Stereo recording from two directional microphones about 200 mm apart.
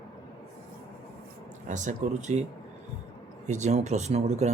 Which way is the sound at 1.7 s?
40° right (ahead or behind).